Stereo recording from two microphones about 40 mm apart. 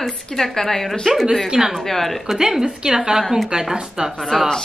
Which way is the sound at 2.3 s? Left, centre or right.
Centre.